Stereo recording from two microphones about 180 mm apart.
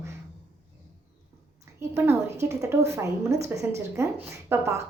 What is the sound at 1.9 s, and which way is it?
A woman's voice, 15° right (ahead or behind).